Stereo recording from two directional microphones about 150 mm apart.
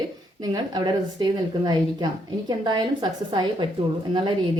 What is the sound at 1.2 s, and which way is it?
A woman's voice, 30° right (ahead or behind).